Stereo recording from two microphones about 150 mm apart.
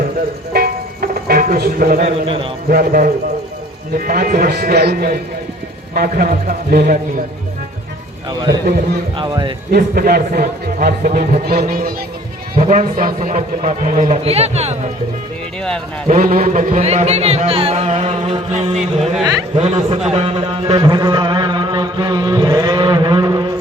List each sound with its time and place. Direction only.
0.5 s music: 90° right
2.0 s a man's voice: 40° right (ahead or behind)
2.6 s speech: 75° right (ahead or behind)
5.9 s speech: 80° right
8.3 s a man's voice: 25° right (ahead or behind)
9.7 s speech: 90° right; by 11.9 s 70° right (ahead or behind)
12.5 s a man's voice: 60° right (ahead or behind)
16.0 s a man's voice: 70° right (ahead or behind); by 20.0 s 45° right (ahead or behind)
20.1 s music: 45° right (ahead or behind)